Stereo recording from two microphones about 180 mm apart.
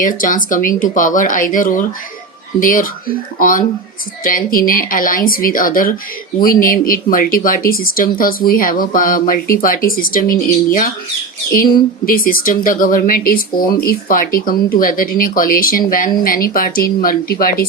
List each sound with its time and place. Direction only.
0.0 s speech: 50° left (ahead or behind)